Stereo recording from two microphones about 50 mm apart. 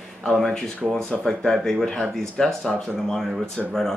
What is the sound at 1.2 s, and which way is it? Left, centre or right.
Speech, centre.